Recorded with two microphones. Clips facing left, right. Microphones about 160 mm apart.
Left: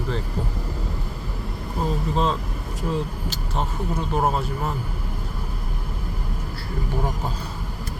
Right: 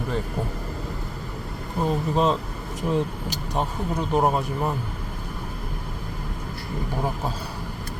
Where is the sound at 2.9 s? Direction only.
15° right (ahead or behind).